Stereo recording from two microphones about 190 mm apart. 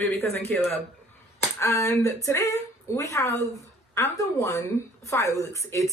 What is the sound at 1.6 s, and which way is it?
Speech, 15° left (ahead or behind).